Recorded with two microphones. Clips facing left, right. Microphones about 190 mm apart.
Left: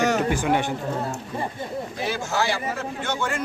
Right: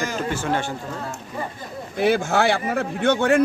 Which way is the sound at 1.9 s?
60° right (ahead or behind).